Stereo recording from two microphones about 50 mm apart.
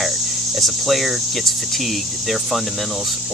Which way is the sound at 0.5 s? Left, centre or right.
Centre.